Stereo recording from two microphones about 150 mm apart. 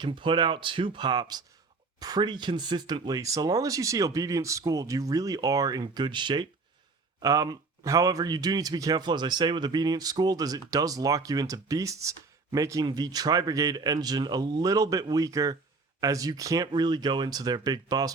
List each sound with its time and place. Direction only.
0.0 s speech: 35° right (ahead or behind)